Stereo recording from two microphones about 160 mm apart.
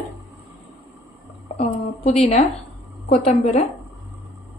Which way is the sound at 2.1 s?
40° left (ahead or behind).